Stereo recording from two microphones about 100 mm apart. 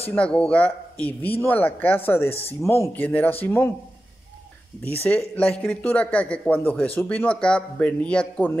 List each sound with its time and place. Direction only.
0.1 s speech: 10° left (ahead or behind); by 2.9 s 30° left (ahead or behind)
2.9 s speech: 15° left (ahead or behind)
5.0 s speech: 15° left (ahead or behind)